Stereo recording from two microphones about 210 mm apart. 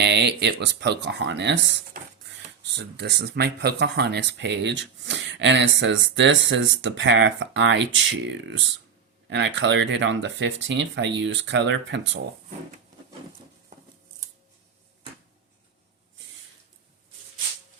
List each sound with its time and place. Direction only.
0.0 s speech: 55° right (ahead or behind)